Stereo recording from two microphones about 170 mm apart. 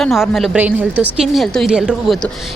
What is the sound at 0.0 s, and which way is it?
A woman's voice, centre (ahead or behind).